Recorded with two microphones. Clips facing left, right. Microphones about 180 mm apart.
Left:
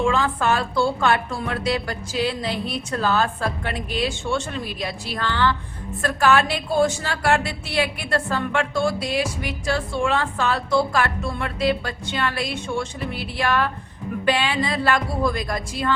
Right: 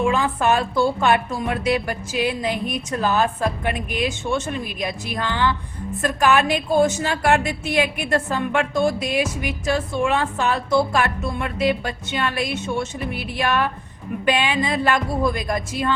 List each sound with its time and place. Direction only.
0.1 s a woman's voice: 15° right (ahead or behind)